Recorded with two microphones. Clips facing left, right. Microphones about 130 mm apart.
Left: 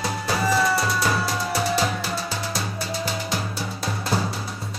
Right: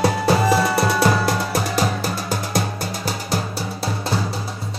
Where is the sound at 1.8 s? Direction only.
45° right (ahead or behind).